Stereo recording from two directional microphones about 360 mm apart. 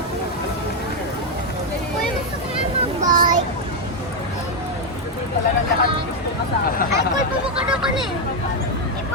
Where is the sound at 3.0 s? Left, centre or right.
Right.